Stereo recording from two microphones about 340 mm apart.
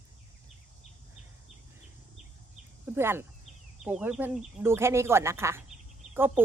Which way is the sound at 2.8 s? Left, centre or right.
Centre.